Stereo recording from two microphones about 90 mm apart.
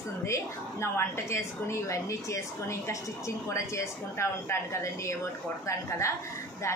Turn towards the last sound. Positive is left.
turn(degrees=35)  # may be behind; listen again after turning